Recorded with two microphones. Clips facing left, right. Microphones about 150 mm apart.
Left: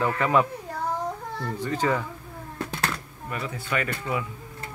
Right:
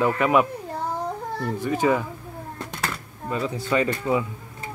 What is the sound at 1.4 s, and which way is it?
Speech, 15° right (ahead or behind).